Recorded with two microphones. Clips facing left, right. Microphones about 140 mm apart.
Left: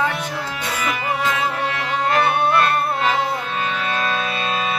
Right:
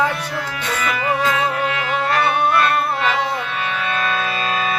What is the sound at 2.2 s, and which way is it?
Music, 45° left (ahead or behind).